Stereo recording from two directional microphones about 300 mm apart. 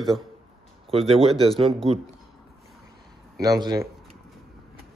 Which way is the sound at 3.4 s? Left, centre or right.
Centre.